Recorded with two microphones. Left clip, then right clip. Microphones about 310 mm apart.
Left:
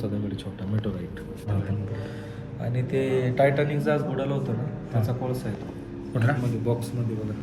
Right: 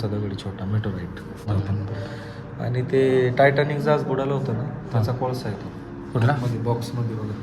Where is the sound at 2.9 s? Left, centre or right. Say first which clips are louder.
Right 7 dB; right.